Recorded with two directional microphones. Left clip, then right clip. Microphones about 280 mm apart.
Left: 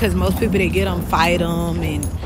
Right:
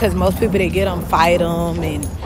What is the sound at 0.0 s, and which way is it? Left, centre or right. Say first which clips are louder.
Speech: right 3 dB; centre.